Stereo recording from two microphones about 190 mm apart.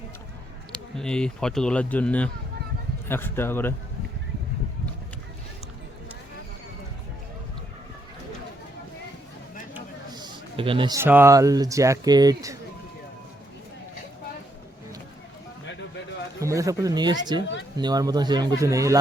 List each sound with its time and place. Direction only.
0.7 s a man's voice: 5° left (ahead or behind)
10.1 s a sound: 20° right (ahead or behind)
10.9 s speech: 10° right (ahead or behind)
16.4 s speech: 15° right (ahead or behind)